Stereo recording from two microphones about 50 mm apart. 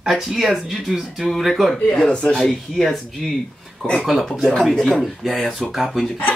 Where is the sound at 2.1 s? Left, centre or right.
Centre.